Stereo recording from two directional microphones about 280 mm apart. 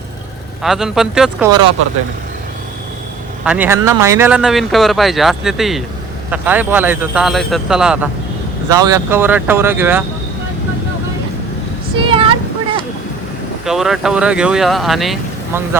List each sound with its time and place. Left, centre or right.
0.6 s speech: centre
3.4 s speech: centre
11.9 s a sound: centre
13.7 s speech: centre